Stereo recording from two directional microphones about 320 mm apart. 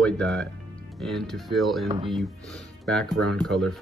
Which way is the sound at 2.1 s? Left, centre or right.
Centre.